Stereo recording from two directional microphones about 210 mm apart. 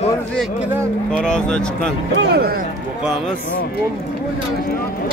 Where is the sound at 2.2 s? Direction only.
50° right (ahead or behind).